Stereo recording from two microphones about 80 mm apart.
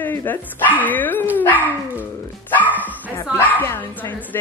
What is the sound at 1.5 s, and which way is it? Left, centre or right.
Speech, right.